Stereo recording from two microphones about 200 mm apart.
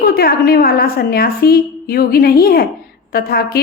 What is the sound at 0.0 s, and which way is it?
A woman's voice, 50° left (ahead or behind).